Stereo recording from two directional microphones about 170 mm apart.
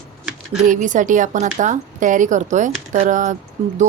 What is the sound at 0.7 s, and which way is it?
A woman's voice, 50° right (ahead or behind).